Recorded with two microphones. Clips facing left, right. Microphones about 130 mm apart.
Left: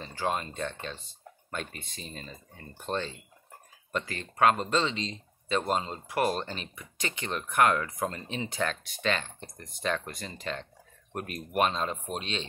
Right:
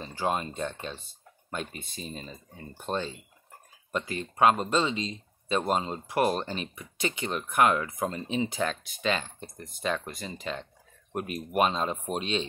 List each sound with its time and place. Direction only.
0.0 s speech: 15° right (ahead or behind)